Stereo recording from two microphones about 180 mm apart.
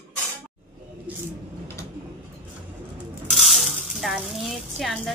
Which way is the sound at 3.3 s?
Centre (ahead or behind).